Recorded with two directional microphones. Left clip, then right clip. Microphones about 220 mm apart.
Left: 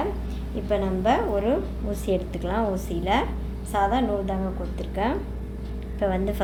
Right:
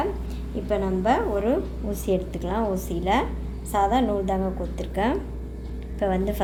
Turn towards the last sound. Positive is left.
turn(degrees=-5)  # may be behind; listen again after turning